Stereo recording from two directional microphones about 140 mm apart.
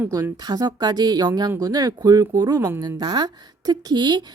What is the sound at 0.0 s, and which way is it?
Speech, 25° right (ahead or behind).